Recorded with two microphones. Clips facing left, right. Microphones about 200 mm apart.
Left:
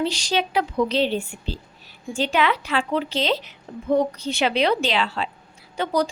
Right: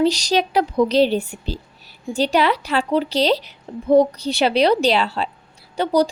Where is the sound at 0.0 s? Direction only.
40° right (ahead or behind).